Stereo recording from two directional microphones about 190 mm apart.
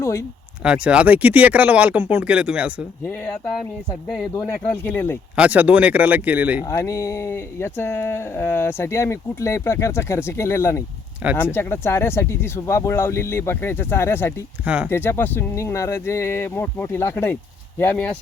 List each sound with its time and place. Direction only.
0.0 s speech: 15° left (ahead or behind)
0.6 s speech: 5° right (ahead or behind)
4.7 s speech: 10° left (ahead or behind)
5.4 s speech: 10° right (ahead or behind)
6.7 s speech: 15° left (ahead or behind)
11.2 s speech: 10° right (ahead or behind)
11.5 s speech: 10° left (ahead or behind)
14.6 s speech: 5° right (ahead or behind)
14.8 s speech: 10° left (ahead or behind)